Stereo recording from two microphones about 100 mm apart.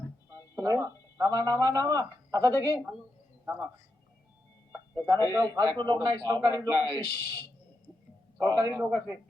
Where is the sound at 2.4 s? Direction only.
25° left (ahead or behind).